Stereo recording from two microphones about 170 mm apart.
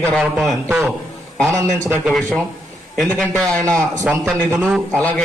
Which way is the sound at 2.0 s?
Centre (ahead or behind).